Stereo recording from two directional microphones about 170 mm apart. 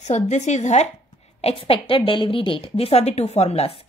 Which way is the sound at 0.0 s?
45° left (ahead or behind).